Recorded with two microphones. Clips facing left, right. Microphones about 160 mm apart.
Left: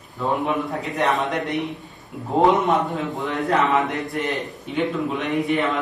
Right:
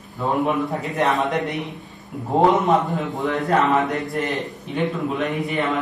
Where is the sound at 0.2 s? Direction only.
Centre (ahead or behind).